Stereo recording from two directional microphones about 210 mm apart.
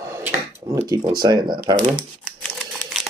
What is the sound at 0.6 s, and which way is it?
Speech, 15° right (ahead or behind).